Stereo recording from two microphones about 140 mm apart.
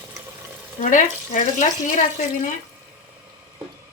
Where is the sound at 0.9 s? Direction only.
65° left (ahead or behind).